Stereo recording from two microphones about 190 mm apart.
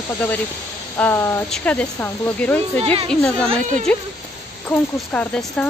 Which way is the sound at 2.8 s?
30° right (ahead or behind).